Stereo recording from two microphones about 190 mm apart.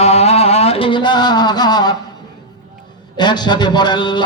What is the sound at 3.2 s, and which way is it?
A man's voice, 25° left (ahead or behind).